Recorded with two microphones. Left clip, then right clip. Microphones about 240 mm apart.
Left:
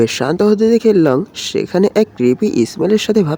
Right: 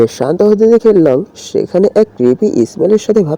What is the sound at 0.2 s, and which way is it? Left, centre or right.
Speech, centre.